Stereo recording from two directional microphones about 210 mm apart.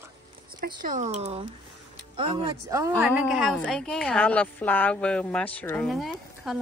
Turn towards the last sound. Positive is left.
turn(degrees=0)  # may be behind; listen again after turning